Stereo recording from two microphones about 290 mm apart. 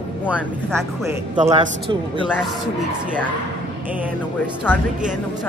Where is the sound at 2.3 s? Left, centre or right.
Centre.